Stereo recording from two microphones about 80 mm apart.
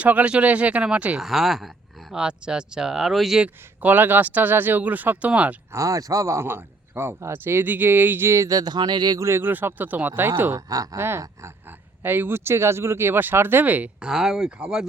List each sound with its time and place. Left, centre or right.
0.0 s speech: centre
1.2 s speech: centre
3.4 s speech: centre
5.7 s speech: right
9.1 s speech: right
14.1 s speech: centre